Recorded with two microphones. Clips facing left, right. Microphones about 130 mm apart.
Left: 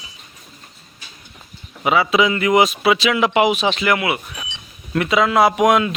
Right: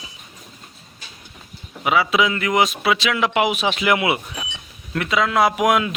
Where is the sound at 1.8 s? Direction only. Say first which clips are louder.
Left 2 dB; centre (ahead or behind).